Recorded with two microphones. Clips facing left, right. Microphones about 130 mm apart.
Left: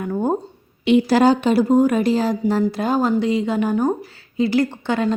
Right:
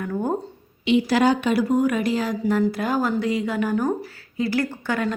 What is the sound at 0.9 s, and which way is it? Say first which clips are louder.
Speech: left 4 dB; 50° left (ahead or behind).